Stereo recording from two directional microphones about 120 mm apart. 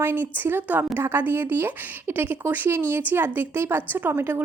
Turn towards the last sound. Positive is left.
turn(degrees=-20)  # may be behind; listen again after turning